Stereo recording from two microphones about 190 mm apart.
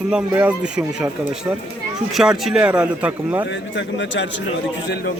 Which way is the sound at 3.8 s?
70° left (ahead or behind).